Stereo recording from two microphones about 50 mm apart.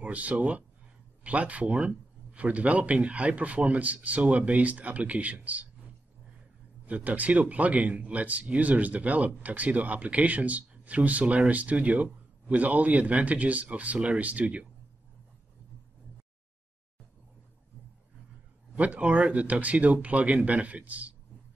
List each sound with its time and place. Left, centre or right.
0.0 s speech: right
6.9 s speech: right
18.8 s speech: right